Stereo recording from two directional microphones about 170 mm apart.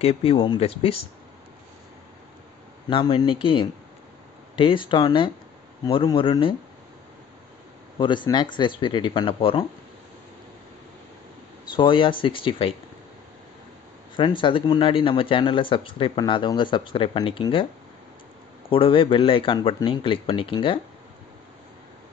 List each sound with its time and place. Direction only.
0.0 s speech: 35° left (ahead or behind)
2.9 s speech: 30° left (ahead or behind)
8.0 s speech: 30° left (ahead or behind)
11.7 s speech: 30° left (ahead or behind)
14.1 s speech: 30° left (ahead or behind)
18.7 s speech: 30° left (ahead or behind)